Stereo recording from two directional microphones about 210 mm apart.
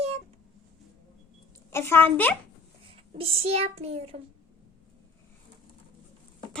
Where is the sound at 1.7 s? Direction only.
10° left (ahead or behind).